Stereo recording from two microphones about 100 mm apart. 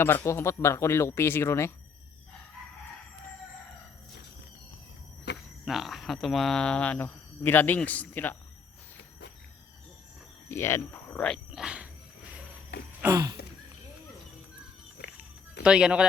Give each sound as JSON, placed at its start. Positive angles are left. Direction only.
{"t": 0.0, "sound": "speech", "side_deg": 25}
{"t": 5.6, "sound": "speech", "side_deg": 0}
{"t": 10.5, "sound": "speech", "side_deg": 25}
{"t": 11.5, "sound": "dog", "side_deg": -10}
{"t": 15.2, "sound": "music", "side_deg": -10}